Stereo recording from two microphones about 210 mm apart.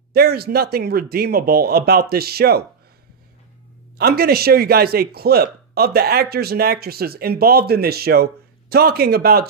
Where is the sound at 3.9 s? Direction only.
45° right (ahead or behind).